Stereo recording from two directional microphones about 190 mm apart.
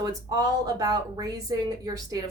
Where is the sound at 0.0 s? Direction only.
20° right (ahead or behind).